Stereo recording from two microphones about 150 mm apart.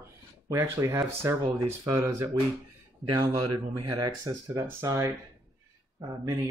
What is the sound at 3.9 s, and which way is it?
Speech, 25° right (ahead or behind).